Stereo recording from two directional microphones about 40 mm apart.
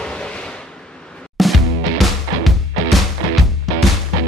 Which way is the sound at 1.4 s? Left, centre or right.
Centre.